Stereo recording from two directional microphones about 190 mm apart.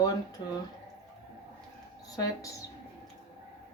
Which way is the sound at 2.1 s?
20° left (ahead or behind).